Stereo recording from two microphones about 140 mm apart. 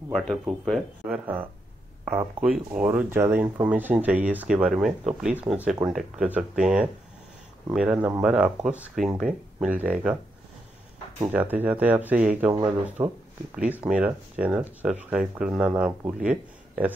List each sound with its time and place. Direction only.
0.1 s speech: centre (ahead or behind)
11.3 s speech: 10° right (ahead or behind)